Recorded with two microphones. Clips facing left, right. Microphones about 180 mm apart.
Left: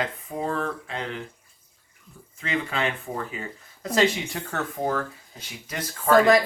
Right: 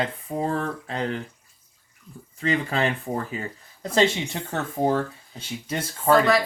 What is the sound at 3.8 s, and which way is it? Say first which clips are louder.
Speech: right 1 dB; 25° right (ahead or behind).